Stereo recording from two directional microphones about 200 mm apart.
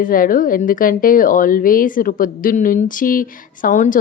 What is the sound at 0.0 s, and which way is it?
A woman's voice, 45° left (ahead or behind).